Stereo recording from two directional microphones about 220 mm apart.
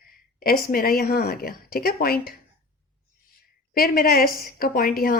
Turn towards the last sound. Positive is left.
turn(degrees=40)  # may be behind; listen again after turning